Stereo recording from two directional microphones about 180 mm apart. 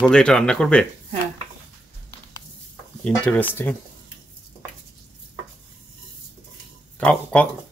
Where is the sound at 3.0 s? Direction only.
5° left (ahead or behind).